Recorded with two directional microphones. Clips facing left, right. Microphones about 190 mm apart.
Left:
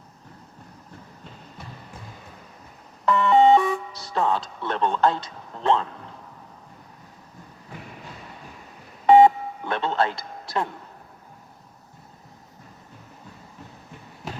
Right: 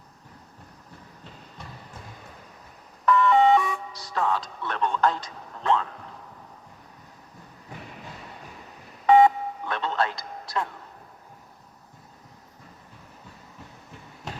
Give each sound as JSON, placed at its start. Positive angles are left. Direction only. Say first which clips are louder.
{"t": 3.1, "sound": "music", "louder": "left 2 dB", "side_deg": 30}
{"t": 9.0, "sound": "telephone dialing", "louder": "left 3 dB", "side_deg": 30}
{"t": 14.2, "sound": "a sound", "louder": "left 3 dB", "side_deg": 5}